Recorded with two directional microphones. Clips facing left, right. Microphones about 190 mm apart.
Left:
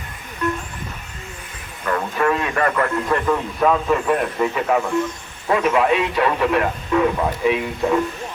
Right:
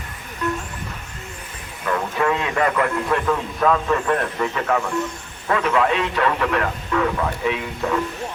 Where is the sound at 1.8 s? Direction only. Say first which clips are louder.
Left 1 dB; 5° right (ahead or behind).